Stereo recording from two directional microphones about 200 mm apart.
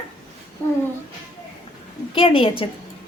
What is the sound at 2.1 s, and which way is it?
Speech, 25° left (ahead or behind).